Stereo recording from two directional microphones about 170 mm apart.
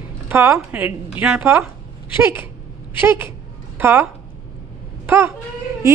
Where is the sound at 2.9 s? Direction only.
10° right (ahead or behind).